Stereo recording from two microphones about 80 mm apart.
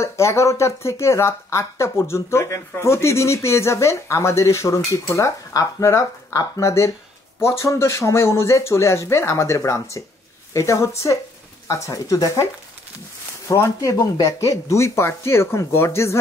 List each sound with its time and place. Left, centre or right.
0.0 s speech: left
13.5 s speech: left